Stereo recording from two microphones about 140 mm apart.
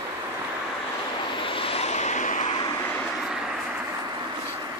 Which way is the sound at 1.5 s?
40° left (ahead or behind).